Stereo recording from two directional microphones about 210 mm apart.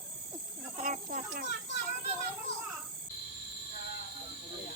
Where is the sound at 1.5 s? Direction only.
50° left (ahead or behind).